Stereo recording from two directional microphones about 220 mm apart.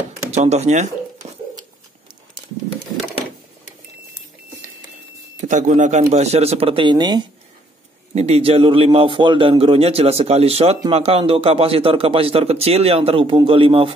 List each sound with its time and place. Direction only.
0.3 s speech: 30° right (ahead or behind)
1.2 s a sound: 30° right (ahead or behind)
5.4 s a man's voice: 35° right (ahead or behind)